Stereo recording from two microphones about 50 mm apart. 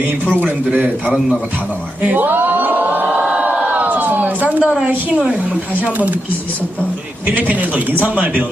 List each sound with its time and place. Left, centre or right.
2.0 s speech: right
3.2 s crowd: right
3.8 s a sound: right
5.8 s speech: right
7.3 s speech: right